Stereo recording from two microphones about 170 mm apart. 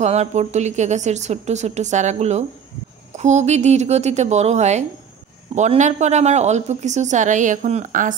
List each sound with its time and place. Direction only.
0.0 s a woman's voice: 40° right (ahead or behind)